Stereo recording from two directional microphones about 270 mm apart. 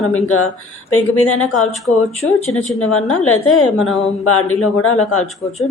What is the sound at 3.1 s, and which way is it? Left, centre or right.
Speech, left.